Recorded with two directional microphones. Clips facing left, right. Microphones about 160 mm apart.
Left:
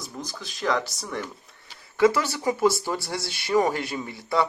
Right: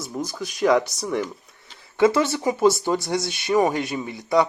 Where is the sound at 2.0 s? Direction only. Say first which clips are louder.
Right 2 dB; 25° right (ahead or behind).